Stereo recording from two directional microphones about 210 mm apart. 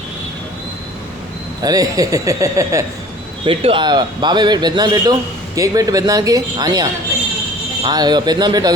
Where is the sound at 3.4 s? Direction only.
25° right (ahead or behind).